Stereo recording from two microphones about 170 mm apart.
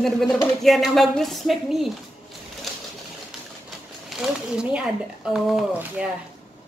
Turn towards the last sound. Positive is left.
turn(degrees=0)  # may be behind; listen again after turning